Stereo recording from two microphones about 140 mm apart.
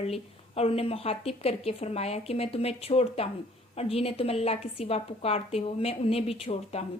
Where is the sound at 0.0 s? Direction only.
45° left (ahead or behind).